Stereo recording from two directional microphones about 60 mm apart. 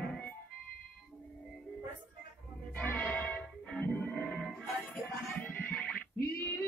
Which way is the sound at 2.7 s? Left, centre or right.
Centre.